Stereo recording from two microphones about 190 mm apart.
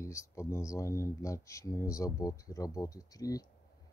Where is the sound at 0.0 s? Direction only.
15° left (ahead or behind).